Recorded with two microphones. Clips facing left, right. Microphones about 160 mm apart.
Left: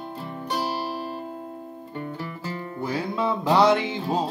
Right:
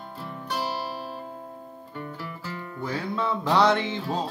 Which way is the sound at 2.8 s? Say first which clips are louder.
Left 2 dB; 10° left (ahead or behind).